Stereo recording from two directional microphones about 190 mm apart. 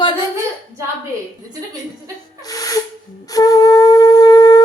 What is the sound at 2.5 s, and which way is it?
Hiss, 20° left (ahead or behind).